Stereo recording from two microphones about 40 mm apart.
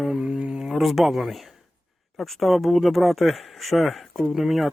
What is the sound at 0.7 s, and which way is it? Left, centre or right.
Speech, centre.